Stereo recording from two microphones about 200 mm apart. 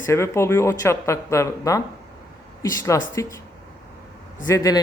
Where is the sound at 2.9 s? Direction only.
15° left (ahead or behind).